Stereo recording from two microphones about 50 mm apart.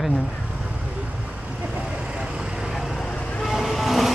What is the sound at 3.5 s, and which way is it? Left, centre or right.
Train, centre.